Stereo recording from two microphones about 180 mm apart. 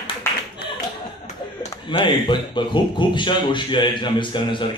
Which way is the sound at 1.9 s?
25° left (ahead or behind).